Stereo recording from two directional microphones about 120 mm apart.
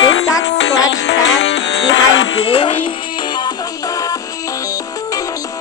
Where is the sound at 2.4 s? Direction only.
50° left (ahead or behind); by 5.4 s 30° left (ahead or behind).